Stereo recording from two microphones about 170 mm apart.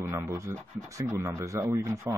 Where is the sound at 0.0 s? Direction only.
15° right (ahead or behind).